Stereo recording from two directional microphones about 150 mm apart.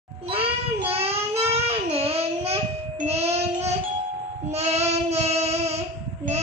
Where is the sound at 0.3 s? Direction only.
40° right (ahead or behind).